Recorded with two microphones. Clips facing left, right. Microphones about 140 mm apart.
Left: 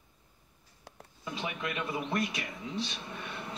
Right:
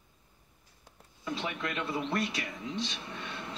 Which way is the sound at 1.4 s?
15° left (ahead or behind).